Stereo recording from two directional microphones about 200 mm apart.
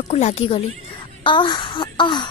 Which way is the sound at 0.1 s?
30° left (ahead or behind).